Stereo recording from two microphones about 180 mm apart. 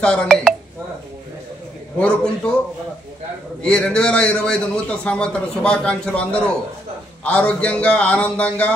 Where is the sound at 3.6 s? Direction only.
5° left (ahead or behind).